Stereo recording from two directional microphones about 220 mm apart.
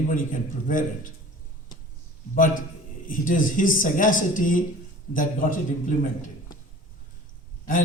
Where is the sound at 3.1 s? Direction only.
35° left (ahead or behind).